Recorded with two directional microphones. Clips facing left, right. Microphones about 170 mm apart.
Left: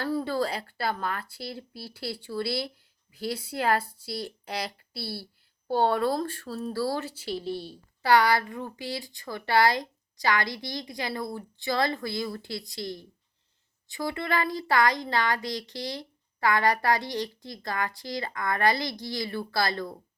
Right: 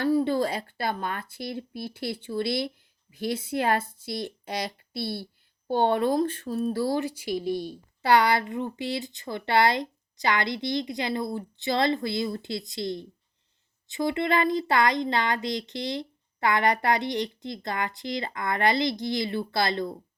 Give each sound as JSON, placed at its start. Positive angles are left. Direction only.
{"t": 0.0, "sound": "speech", "side_deg": -15}